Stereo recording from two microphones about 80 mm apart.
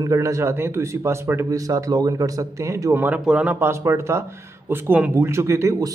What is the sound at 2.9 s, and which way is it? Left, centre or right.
Speech, right.